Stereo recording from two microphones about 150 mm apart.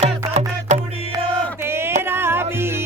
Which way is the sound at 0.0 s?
50° right (ahead or behind).